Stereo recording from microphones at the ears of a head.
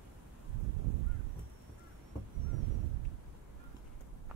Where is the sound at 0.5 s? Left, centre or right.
Right.